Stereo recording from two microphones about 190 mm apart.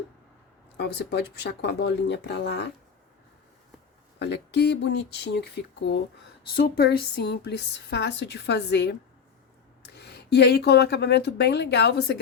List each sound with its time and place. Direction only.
0.8 s speech: 60° left (ahead or behind)
4.2 s speech: 65° left (ahead or behind)
6.5 s speech: 55° left (ahead or behind)